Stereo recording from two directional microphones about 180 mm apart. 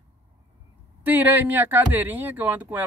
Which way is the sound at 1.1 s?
10° right (ahead or behind).